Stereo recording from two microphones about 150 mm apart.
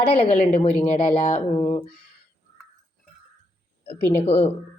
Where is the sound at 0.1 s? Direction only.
40° left (ahead or behind).